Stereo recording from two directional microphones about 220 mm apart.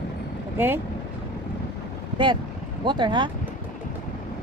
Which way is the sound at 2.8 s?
20° right (ahead or behind).